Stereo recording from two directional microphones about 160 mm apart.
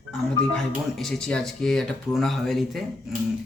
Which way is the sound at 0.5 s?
5° left (ahead or behind).